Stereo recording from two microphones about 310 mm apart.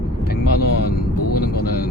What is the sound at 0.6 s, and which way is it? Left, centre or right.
Vehicle, left.